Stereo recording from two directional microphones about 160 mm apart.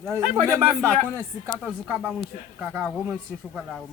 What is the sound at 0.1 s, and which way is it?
Speech, 15° right (ahead or behind).